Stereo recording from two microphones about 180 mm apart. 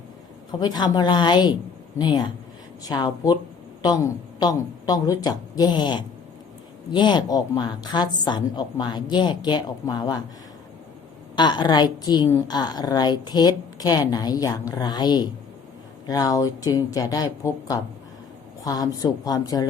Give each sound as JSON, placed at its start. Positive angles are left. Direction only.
{"t": 0.6, "sound": "a woman's voice", "side_deg": 25}
{"t": 11.3, "sound": "a woman's voice", "side_deg": 25}